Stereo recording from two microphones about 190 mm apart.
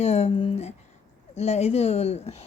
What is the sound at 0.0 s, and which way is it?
Speech, 35° left (ahead or behind).